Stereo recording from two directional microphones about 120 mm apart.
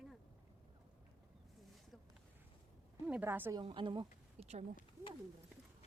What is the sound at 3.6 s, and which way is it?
Speech, 45° right (ahead or behind).